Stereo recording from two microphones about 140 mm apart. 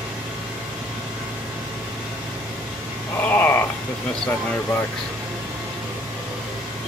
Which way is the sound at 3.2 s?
15° left (ahead or behind).